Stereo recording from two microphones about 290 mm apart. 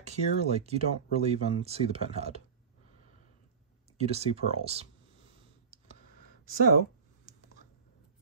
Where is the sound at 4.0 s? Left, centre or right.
Right.